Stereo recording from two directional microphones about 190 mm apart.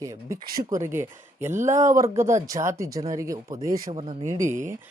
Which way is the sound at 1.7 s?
40° right (ahead or behind).